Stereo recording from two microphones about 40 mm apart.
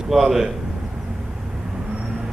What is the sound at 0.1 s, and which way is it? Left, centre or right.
Speech, centre.